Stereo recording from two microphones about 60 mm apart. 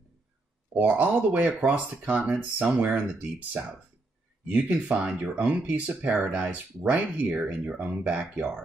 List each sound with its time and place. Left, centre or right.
0.7 s speech: right
4.5 s speech: right